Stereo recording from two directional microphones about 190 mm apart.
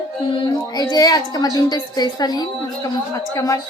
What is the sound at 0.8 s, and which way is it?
A woman's voice, 20° left (ahead or behind).